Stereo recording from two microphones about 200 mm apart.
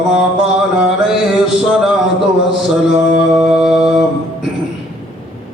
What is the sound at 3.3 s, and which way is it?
Music, 5° right (ahead or behind).